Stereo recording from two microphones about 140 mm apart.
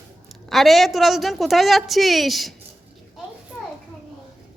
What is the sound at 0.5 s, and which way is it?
A woman's voice, centre (ahead or behind).